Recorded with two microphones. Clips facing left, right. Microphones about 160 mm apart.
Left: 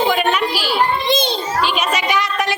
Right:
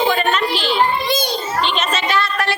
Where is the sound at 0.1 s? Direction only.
10° left (ahead or behind).